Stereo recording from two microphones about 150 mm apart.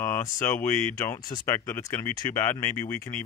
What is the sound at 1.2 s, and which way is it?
Speech, 25° left (ahead or behind).